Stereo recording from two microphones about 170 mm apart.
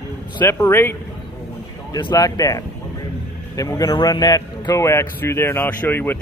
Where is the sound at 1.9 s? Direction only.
20° left (ahead or behind).